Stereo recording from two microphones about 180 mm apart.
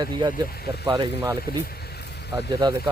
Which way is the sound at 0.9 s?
20° right (ahead or behind).